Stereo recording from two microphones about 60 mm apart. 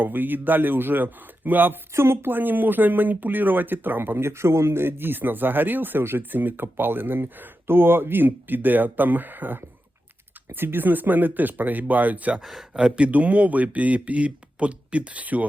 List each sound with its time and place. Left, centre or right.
0.0 s speech: right
1.9 s speech: right
12.4 s speech: centre
12.8 s speech: right